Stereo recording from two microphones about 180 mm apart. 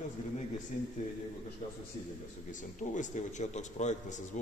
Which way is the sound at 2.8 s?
45° left (ahead or behind).